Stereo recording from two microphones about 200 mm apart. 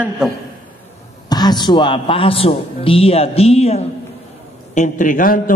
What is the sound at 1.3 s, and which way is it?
A man's voice, 20° left (ahead or behind).